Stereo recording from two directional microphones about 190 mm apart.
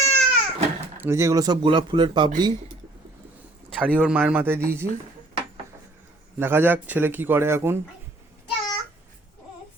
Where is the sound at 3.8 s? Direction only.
5° right (ahead or behind).